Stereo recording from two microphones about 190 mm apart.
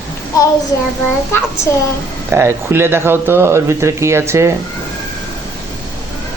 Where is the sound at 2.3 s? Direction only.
15° right (ahead or behind).